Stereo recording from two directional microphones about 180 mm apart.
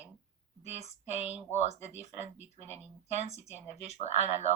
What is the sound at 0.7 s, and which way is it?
Speech, 35° left (ahead or behind).